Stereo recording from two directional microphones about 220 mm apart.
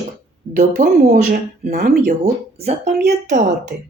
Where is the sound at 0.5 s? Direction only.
35° right (ahead or behind).